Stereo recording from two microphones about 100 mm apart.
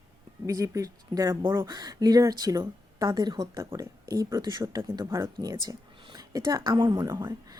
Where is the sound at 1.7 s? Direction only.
40° right (ahead or behind).